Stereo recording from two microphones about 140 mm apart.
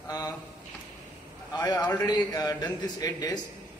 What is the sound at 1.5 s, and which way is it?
A man's voice, 30° left (ahead or behind).